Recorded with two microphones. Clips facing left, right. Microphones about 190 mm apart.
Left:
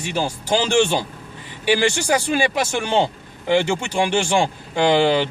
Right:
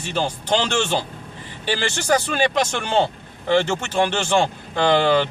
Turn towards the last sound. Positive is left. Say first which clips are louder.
# left 1 dB
turn(degrees=15)  # may be behind; listen again after turning